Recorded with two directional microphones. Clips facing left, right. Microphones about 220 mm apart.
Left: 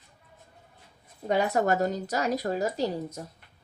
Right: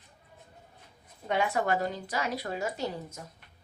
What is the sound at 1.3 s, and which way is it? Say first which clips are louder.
A woman's voice: left 4 dB; 40° left (ahead or behind).